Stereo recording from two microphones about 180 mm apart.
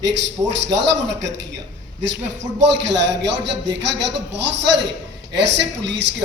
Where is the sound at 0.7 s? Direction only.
80° right.